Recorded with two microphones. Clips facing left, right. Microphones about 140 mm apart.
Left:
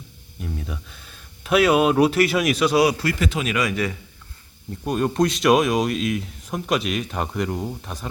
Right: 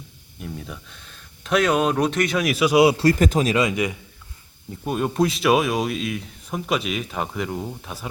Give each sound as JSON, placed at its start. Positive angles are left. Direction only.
{"t": 0.3, "sound": "speech", "side_deg": 0}
{"t": 3.0, "sound": "speech", "side_deg": -40}
{"t": 3.6, "sound": "a man's voice", "side_deg": -20}
{"t": 4.8, "sound": "speech", "side_deg": -5}